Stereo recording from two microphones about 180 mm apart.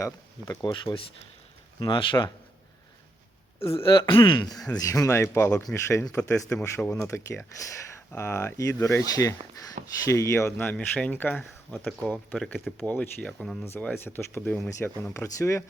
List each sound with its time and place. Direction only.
0.0 s speech: 20° left (ahead or behind)
3.6 s speech: 15° left (ahead or behind)
3.9 s speech: 25° left (ahead or behind); by 11.4 s 10° left (ahead or behind)
11.9 s speech: 5° right (ahead or behind)
12.3 s speech: 10° left (ahead or behind)